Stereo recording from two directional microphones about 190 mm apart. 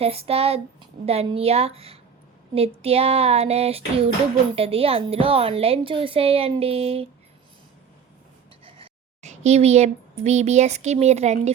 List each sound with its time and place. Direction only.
0.0 s a woman's voice: 30° right (ahead or behind)
8.6 s speech: 35° right (ahead or behind)